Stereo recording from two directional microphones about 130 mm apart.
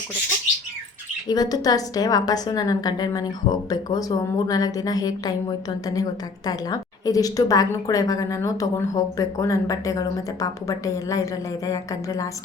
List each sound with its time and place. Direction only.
1.3 s a woman's voice: 30° left (ahead or behind)